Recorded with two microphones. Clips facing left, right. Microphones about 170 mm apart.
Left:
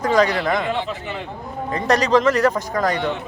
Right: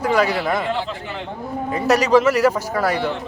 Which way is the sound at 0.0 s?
10° right (ahead or behind).